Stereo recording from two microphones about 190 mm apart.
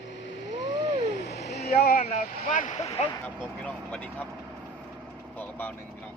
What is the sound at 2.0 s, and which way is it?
Speech, 35° left (ahead or behind).